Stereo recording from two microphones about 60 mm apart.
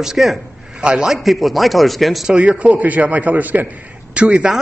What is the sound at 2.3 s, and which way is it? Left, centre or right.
A man's voice, centre.